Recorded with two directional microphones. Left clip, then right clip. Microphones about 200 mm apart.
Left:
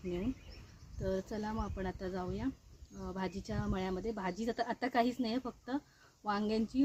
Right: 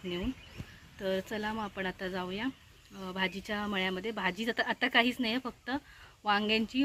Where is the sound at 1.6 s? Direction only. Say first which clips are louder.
Right 5 dB; 10° right (ahead or behind).